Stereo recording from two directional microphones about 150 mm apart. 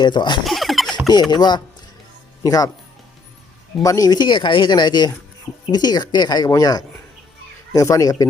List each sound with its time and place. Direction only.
0.0 s speech: 30° left (ahead or behind)
0.4 s a sound: centre (ahead or behind)
1.3 s speech: 30° left (ahead or behind)
3.8 s speech: 25° left (ahead or behind)